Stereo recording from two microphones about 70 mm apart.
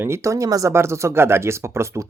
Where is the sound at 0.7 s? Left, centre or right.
Right.